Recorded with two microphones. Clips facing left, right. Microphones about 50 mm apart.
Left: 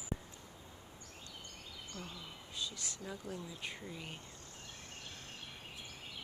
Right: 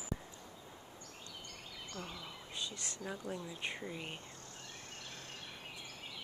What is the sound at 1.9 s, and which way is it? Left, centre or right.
Speech, right.